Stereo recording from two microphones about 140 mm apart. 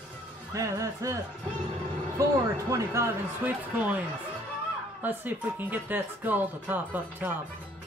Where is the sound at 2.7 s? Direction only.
20° right (ahead or behind).